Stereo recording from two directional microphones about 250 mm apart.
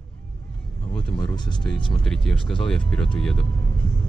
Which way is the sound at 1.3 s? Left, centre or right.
Centre.